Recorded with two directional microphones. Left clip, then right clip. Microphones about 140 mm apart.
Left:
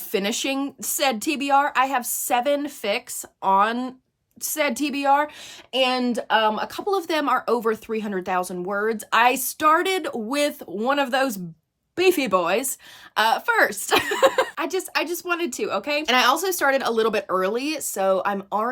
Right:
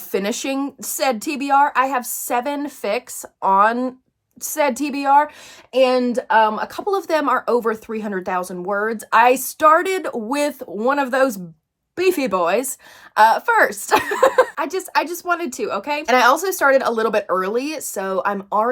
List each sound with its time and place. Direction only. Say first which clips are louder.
0.1 s speech: right 2 dB; 20° left (ahead or behind)